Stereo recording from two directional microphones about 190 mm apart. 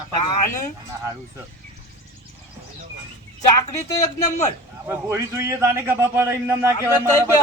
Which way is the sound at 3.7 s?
40° left (ahead or behind).